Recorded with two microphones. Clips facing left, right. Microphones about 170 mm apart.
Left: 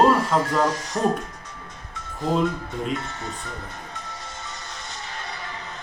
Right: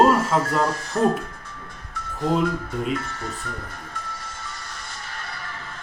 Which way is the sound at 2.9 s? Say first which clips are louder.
Right 1 dB; 20° left (ahead or behind).